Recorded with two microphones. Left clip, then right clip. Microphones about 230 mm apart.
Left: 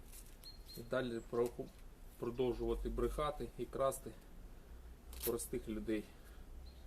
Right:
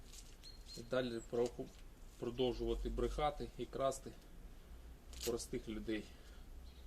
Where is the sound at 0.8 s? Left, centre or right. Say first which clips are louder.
Even; centre.